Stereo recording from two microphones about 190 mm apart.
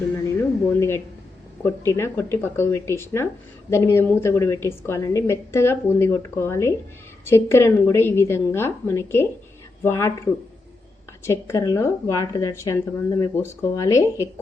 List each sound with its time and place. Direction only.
0.8 s a woman's voice: 15° left (ahead or behind)
11.3 s a woman's voice: 15° left (ahead or behind)